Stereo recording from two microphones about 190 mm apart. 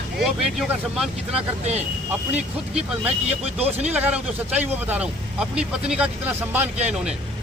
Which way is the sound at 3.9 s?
10° right (ahead or behind).